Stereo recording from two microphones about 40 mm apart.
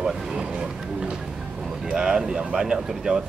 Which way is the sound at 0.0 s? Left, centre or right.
Centre.